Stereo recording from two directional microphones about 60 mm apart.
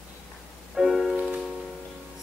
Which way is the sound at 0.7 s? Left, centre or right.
Centre.